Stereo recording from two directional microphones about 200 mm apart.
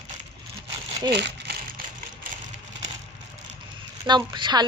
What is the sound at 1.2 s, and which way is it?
Crumpling, 60° right (ahead or behind).